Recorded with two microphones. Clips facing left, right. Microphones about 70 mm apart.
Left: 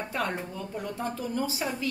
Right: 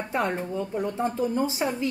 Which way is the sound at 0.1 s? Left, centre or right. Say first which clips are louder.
Right 7 dB; right.